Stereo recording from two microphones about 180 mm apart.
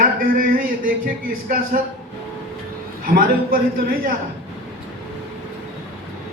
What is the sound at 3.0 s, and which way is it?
A man's voice, 55° right (ahead or behind).